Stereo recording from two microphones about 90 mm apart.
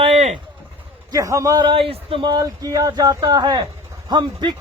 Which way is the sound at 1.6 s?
90° right.